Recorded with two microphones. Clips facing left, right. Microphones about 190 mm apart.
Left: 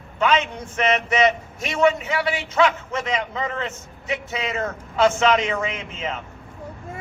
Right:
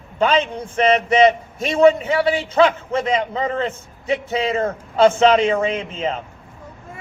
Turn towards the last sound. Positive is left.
turn(degrees=-30)  # may be behind; listen again after turning